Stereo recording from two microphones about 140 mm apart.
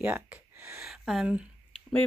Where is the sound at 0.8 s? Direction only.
Centre (ahead or behind).